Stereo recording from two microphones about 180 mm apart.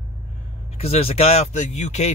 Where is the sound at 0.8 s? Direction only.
35° left (ahead or behind).